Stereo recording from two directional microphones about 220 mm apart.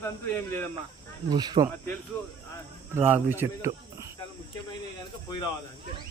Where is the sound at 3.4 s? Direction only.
10° right (ahead or behind).